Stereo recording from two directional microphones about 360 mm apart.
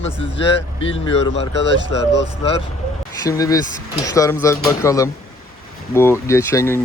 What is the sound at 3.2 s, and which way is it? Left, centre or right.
Speech, centre.